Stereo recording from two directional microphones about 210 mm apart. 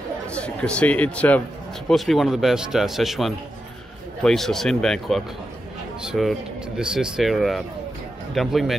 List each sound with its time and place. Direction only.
0.3 s a man's voice: 5° left (ahead or behind)